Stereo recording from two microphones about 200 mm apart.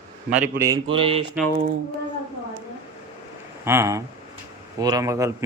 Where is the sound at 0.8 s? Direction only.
25° right (ahead or behind).